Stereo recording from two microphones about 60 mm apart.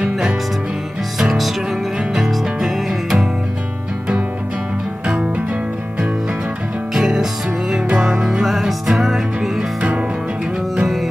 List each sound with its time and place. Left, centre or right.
1.1 s music: centre
5.0 s music: centre
6.9 s music: centre
9.8 s music: right
10.8 s music: centre